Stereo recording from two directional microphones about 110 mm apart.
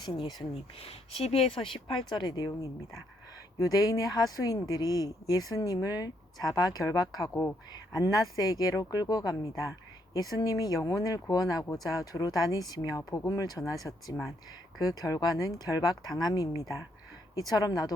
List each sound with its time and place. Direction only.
0.0 s speech: 40° left (ahead or behind)
0.5 s speech: 65° left (ahead or behind); by 2.5 s 40° left (ahead or behind)
2.5 s speech: 25° left (ahead or behind)